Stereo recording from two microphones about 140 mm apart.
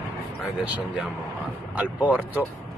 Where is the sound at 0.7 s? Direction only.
5° right (ahead or behind).